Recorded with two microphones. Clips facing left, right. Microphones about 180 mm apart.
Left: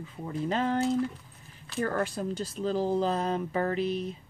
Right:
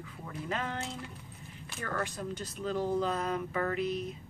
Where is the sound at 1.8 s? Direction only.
35° left (ahead or behind).